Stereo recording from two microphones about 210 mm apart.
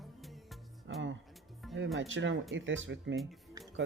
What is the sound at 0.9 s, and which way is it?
Music, 60° right (ahead or behind).